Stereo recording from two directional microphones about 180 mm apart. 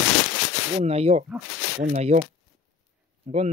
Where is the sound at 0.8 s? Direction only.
35° right (ahead or behind).